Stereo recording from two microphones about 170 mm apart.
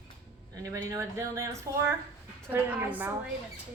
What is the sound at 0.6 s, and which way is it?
A woman's voice, 20° right (ahead or behind).